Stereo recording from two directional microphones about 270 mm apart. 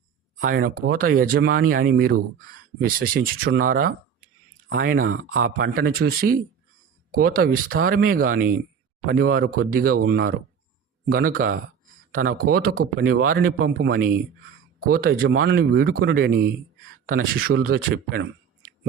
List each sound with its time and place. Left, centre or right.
0.3 s speech: right